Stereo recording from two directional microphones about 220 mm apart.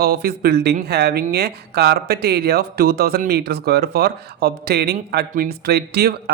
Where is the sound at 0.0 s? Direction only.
45° right (ahead or behind).